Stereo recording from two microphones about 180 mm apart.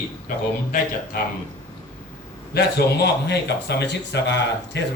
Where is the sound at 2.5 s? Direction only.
65° left (ahead or behind).